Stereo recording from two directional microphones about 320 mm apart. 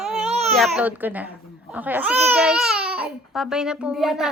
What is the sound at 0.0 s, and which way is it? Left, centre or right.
Baby cry, centre.